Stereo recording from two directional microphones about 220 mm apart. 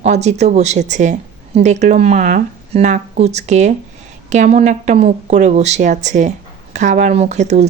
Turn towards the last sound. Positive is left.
turn(degrees=-30)  # may be behind; listen again after turning